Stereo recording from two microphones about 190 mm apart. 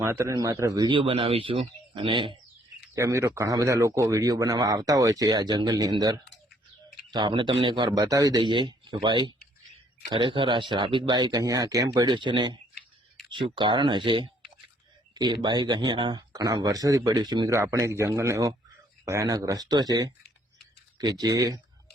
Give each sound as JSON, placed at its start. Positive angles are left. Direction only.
{"t": 0.0, "sound": "speech", "side_deg": -15}
{"t": 2.9, "sound": "speech", "side_deg": -15}